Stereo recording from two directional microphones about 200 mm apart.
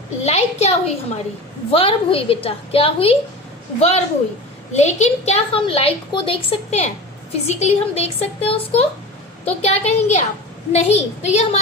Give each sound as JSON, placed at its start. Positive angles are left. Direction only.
{"t": 0.2, "sound": "a woman's voice", "side_deg": 35}